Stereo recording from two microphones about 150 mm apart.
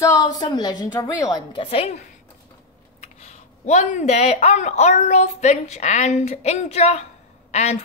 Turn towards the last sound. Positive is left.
turn(degrees=45)  # may be behind; listen again after turning